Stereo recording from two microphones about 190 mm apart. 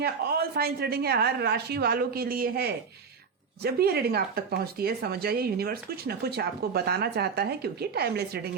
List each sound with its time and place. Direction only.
0.0 s speech: 55° right (ahead or behind)